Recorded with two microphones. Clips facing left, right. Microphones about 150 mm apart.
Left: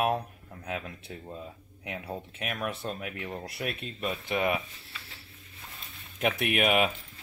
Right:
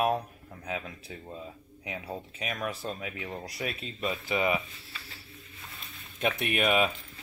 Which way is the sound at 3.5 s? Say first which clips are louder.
Even; 55° left (ahead or behind).